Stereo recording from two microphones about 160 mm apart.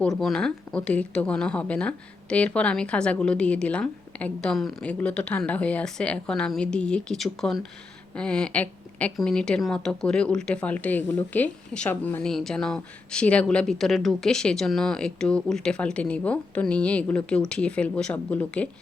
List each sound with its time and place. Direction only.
0.2 s a woman's voice: 5° left (ahead or behind)